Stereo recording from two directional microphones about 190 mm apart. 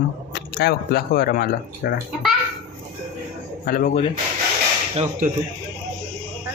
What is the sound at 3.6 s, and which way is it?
Speech, 50° left (ahead or behind).